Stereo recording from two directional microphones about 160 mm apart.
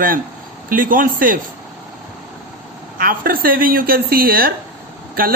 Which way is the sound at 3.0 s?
65° right (ahead or behind).